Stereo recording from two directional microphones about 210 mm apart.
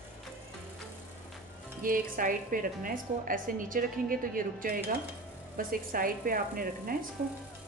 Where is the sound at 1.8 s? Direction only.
40° right (ahead or behind).